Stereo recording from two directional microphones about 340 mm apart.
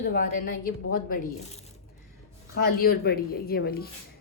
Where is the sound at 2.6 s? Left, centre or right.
Left.